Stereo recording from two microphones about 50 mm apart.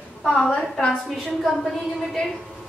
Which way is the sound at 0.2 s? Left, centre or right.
Centre.